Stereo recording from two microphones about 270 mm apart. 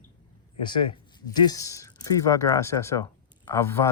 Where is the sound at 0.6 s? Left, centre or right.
Centre.